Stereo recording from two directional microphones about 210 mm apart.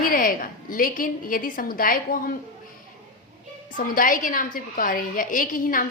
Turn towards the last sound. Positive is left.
turn(degrees=40)  # may be behind; listen again after turning